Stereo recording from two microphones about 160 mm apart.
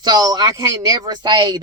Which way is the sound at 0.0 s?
25° right (ahead or behind).